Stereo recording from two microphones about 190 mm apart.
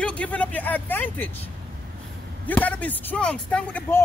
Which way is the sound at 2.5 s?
10° left (ahead or behind).